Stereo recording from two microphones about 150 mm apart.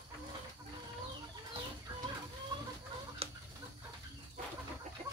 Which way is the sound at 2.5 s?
30° right (ahead or behind).